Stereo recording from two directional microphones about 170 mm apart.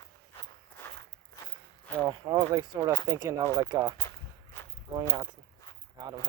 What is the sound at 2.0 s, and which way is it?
Speech, 25° right (ahead or behind).